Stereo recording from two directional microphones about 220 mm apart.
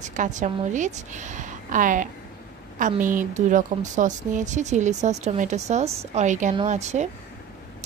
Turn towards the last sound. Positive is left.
turn(degrees=-30)  # may be behind; listen again after turning